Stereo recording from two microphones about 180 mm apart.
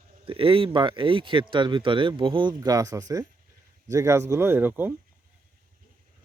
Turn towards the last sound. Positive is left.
turn(degrees=-10)  # may be behind; listen again after turning